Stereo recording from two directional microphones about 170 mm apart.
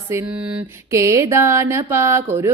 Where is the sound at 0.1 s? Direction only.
10° right (ahead or behind).